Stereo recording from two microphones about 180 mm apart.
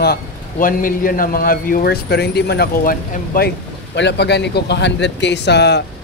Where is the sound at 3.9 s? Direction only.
75° left (ahead or behind).